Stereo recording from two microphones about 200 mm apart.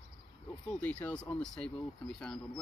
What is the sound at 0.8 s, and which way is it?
Speech, 5° left (ahead or behind).